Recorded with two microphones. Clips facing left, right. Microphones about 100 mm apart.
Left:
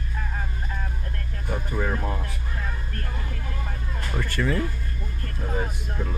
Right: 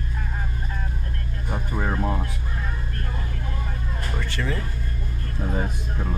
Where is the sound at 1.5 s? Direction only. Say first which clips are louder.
Even; 25° right (ahead or behind).